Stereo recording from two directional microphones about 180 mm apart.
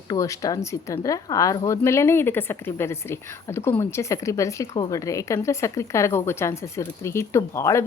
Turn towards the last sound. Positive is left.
turn(degrees=15)  # may be behind; listen again after turning